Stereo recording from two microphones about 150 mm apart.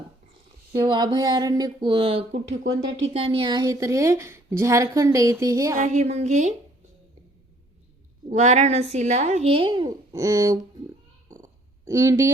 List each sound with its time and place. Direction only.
0.9 s a woman's voice: 30° right (ahead or behind)
5.7 s speech: 50° right (ahead or behind)
8.3 s speech: 50° right (ahead or behind); by 10.6 s 20° right (ahead or behind)
11.9 s a woman's voice: 20° right (ahead or behind)